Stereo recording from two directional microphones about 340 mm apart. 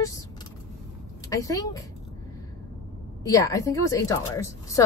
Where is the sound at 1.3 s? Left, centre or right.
Centre.